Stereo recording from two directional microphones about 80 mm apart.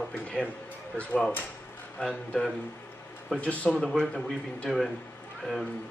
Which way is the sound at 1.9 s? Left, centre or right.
Centre.